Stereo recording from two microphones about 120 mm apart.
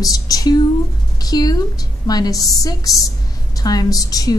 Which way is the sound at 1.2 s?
30° left (ahead or behind).